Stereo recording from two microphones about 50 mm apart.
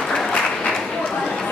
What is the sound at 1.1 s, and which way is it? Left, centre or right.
Chatter, centre.